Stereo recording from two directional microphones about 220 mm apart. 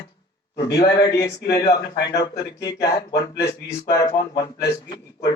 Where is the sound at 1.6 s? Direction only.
45° left (ahead or behind).